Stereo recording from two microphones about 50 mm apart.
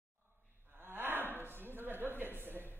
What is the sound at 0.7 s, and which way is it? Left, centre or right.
Wild animals, right.